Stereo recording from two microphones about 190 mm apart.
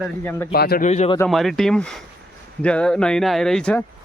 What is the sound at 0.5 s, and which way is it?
Speech, 55° left (ahead or behind).